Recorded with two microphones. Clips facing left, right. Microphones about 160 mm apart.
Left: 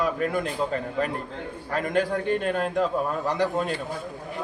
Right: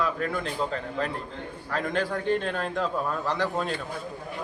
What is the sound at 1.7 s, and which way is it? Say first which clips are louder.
Speech: left 3 dB; 45° left (ahead or behind).